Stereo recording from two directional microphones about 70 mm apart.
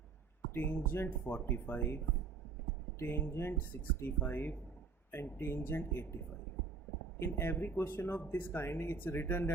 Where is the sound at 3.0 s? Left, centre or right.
Left.